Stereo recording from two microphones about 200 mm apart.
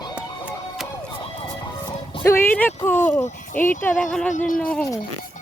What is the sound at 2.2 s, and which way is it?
Speech, 10° left (ahead or behind).